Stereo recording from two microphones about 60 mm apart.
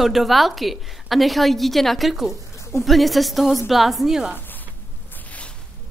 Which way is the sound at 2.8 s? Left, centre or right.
Centre.